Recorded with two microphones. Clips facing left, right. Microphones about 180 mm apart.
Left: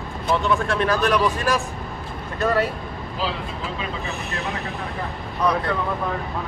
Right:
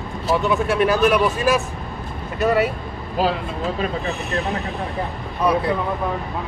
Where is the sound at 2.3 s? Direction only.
5° right (ahead or behind).